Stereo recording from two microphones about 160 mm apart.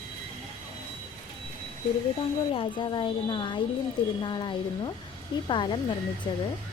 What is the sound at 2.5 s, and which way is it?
A woman's voice, 30° left (ahead or behind).